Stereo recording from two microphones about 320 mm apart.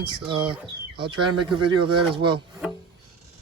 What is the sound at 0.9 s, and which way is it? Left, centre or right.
Speech, centre.